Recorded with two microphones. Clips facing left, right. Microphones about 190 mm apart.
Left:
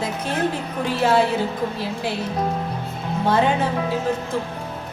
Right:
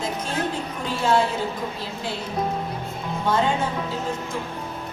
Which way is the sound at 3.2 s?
60° left (ahead or behind).